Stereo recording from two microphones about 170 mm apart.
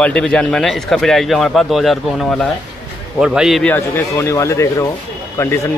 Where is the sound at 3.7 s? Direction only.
15° left (ahead or behind).